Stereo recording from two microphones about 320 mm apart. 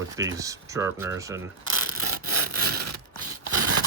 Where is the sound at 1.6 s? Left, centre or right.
Right.